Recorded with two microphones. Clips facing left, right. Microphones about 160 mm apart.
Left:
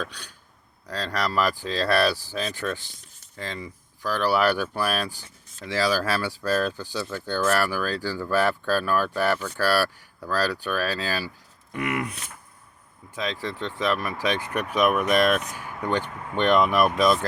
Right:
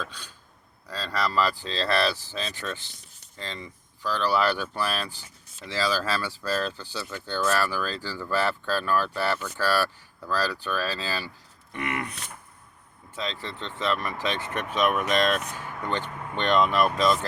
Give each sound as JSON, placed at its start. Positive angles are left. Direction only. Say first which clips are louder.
{"t": 0.0, "sound": "speech", "louder": "left 3 dB", "side_deg": 15}
{"t": 13.1, "sound": "speech", "louder": "left 4 dB", "side_deg": 15}